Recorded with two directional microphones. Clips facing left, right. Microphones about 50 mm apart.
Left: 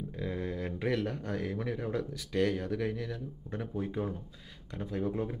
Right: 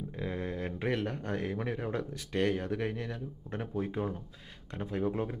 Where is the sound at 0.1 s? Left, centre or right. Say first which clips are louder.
Even; centre.